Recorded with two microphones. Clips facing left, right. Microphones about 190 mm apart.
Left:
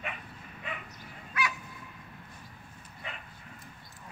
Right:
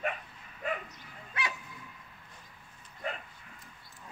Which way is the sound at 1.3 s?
30° right (ahead or behind).